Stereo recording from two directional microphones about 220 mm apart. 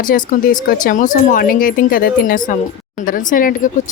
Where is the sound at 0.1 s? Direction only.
40° left (ahead or behind).